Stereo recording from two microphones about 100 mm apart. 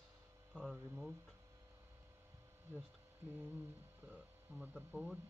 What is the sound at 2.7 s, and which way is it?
Speech, 20° right (ahead or behind).